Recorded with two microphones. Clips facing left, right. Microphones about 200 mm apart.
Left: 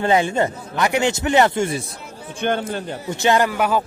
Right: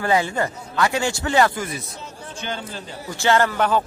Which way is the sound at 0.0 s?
20° left (ahead or behind).